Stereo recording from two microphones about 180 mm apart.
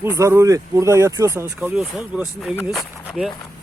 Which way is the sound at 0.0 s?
15° right (ahead or behind).